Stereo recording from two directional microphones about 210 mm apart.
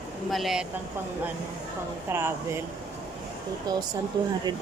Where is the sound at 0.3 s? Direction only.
Centre (ahead or behind).